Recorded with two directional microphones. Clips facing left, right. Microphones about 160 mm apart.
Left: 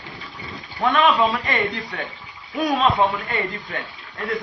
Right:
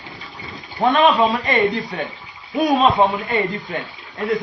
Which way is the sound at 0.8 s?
25° right (ahead or behind).